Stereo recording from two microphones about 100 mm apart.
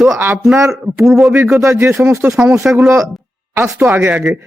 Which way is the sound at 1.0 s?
5° right (ahead or behind).